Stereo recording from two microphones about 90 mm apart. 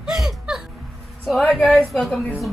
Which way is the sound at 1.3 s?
Centre (ahead or behind).